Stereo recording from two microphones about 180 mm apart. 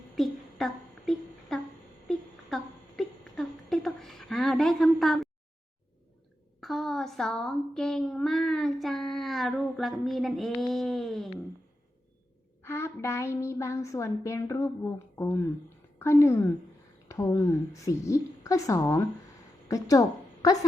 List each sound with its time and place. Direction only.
0.2 s a sound: centre (ahead or behind)
6.6 s speech: centre (ahead or behind)
12.6 s a child's voice: 15° left (ahead or behind)